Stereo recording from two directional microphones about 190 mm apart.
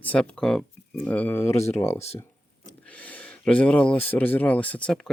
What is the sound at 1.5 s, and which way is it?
Speech, 35° left (ahead or behind).